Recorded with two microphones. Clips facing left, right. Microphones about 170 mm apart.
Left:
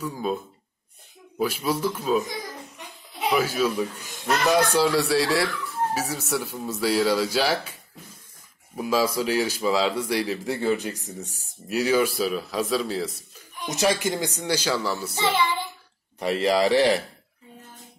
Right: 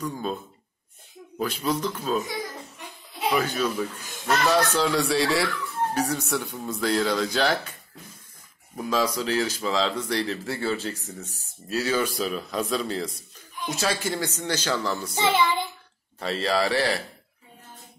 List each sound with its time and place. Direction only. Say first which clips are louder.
0.0 s speech: left 2 dB; 5° left (ahead or behind)
1.4 s speech: left 2 dB; 10° left (ahead or behind)
3.3 s speech: left 3 dB; 5° left (ahead or behind)
8.7 s speech: left 2 dB; 10° left (ahead or behind)
13.7 s speech: left 4 dB; 20° left (ahead or behind)
16.2 s speech: left 3 dB; 15° left (ahead or behind)